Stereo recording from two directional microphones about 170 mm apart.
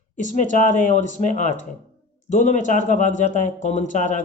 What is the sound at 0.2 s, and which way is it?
Speech, 45° left (ahead or behind).